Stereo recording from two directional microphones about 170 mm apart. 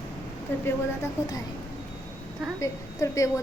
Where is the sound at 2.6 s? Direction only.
20° left (ahead or behind).